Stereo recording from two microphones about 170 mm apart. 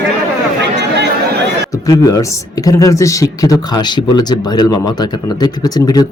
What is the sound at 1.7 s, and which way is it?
A man's voice, 20° left (ahead or behind).